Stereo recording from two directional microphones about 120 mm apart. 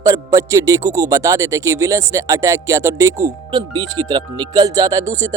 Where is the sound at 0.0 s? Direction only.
30° right (ahead or behind).